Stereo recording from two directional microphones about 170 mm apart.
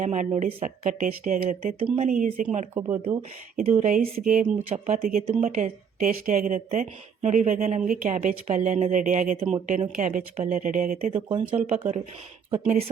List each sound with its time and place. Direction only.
0.0 s speech: 45° right (ahead or behind)
2.7 s speech: 20° right (ahead or behind)
3.0 s speech: 35° right (ahead or behind)
3.6 s speech: 45° right (ahead or behind)
11.1 s speech: 35° right (ahead or behind)